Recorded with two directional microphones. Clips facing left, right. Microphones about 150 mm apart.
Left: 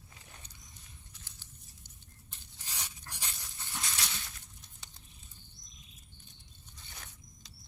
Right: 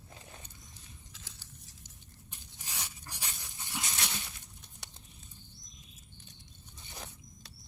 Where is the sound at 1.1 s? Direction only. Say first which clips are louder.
Right 3 dB; 90° right.